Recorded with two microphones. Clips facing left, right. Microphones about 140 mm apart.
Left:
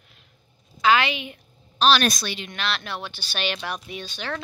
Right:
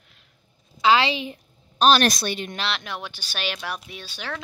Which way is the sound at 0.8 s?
30° right (ahead or behind).